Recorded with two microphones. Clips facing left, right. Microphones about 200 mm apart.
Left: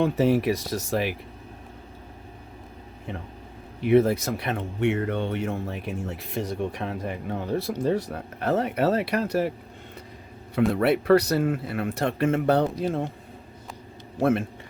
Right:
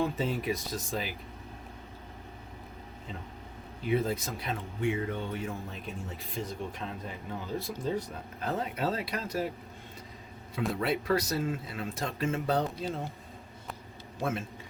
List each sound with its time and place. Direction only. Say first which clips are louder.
0.0 s speech: left 9 dB; 70° left (ahead or behind)
3.8 s speech: left 10 dB; 75° left (ahead or behind)
10.7 s speech: left 9 dB; 65° left (ahead or behind)
14.2 s speech: left 11 dB; 60° left (ahead or behind)